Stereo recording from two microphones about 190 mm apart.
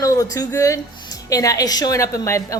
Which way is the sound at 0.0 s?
20° left (ahead or behind).